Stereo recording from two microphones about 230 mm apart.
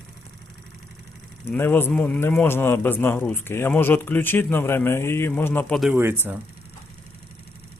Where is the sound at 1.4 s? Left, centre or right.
Centre.